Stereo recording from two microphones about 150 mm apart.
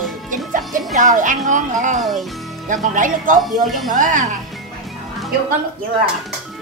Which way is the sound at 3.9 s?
55° right (ahead or behind).